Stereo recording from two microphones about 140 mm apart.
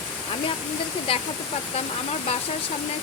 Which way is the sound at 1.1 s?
40° left (ahead or behind).